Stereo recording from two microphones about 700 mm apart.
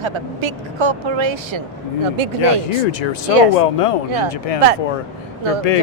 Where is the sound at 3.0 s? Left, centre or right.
Left.